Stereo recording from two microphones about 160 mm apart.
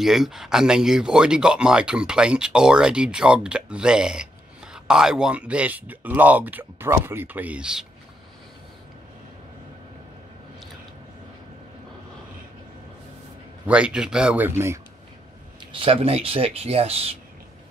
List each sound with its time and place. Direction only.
0.0 s speech: centre (ahead or behind)
13.7 s speech: 5° right (ahead or behind)
15.7 s speech: 35° right (ahead or behind)